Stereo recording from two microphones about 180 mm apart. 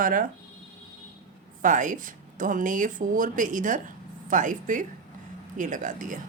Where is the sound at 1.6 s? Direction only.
45° right (ahead or behind).